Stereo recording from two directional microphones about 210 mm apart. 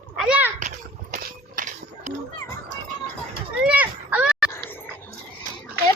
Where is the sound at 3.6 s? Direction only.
5° right (ahead or behind).